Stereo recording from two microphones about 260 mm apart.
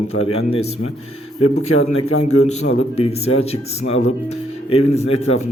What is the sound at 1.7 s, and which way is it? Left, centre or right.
Speech, left.